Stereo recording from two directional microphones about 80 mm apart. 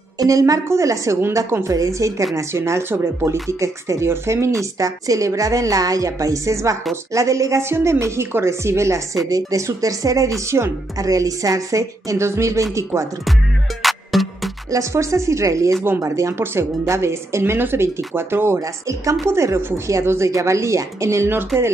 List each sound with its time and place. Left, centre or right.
0.2 s a woman's voice: right
10.4 s a woman's voice: right
11.0 s a woman's voice: right
13.8 s music: centre
14.7 s a woman's voice: right
18.6 s a woman's voice: right